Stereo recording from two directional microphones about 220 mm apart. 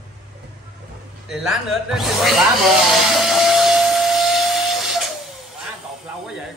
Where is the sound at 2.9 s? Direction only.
Centre (ahead or behind).